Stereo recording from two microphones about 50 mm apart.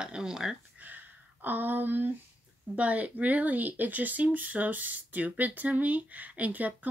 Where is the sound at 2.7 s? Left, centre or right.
Right.